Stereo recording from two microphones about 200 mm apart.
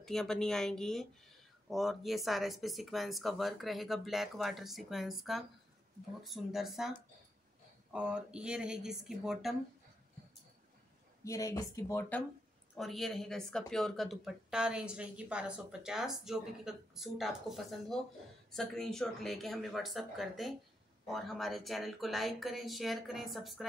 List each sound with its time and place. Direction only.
0.0 s speech: centre (ahead or behind)
11.2 s speech: 15° left (ahead or behind)
12.7 s speech: centre (ahead or behind)